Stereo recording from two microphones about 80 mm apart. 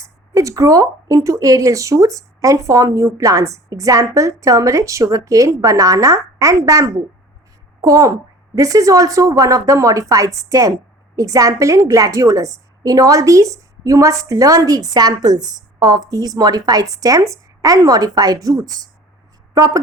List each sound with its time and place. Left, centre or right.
0.0 s a woman's voice: right